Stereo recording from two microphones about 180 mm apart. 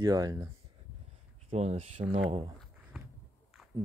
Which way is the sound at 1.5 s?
35° right (ahead or behind).